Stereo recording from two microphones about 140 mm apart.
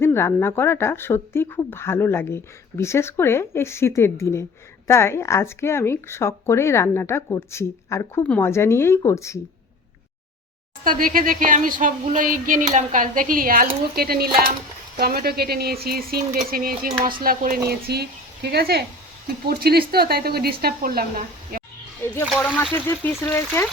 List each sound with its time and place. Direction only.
0.0 s a woman's voice: 20° left (ahead or behind)
10.8 s speech: 85° right
19.5 s speech: 90° right
22.3 s a woman's voice: 5° left (ahead or behind)